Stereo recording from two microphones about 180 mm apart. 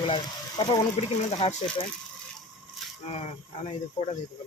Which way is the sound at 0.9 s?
40° left (ahead or behind).